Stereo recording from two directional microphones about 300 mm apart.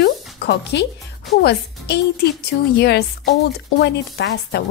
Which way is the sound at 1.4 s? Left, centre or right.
Left.